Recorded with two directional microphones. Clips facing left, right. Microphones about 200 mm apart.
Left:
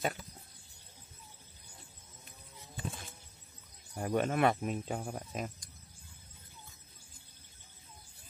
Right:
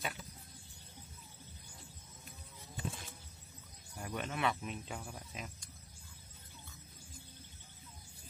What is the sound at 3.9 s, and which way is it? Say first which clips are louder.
Speech: left 10 dB; 45° left (ahead or behind).